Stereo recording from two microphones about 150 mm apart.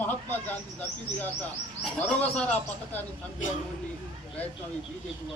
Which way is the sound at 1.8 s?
5° left (ahead or behind).